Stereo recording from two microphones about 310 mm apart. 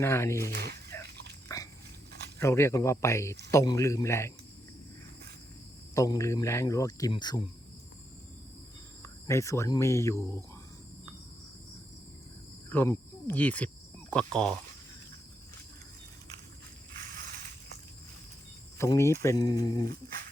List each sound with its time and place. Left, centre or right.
0.0 s speech: centre
0.5 s speech: right
2.4 s speech: centre
5.9 s speech: centre
9.2 s speech: centre
12.7 s speech: centre
18.8 s speech: centre